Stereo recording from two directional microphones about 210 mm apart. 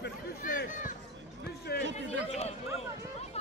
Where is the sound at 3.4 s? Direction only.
30° left (ahead or behind).